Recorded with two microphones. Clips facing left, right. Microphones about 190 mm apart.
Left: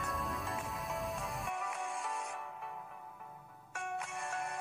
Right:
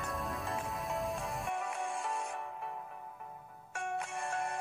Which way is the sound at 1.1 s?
30° right (ahead or behind).